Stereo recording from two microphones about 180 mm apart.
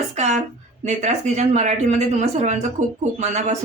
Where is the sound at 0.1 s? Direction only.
40° right (ahead or behind).